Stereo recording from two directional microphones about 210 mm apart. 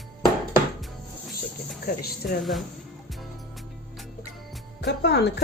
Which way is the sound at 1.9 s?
45° left (ahead or behind).